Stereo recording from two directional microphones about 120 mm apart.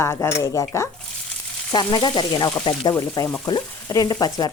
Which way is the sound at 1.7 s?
40° left (ahead or behind).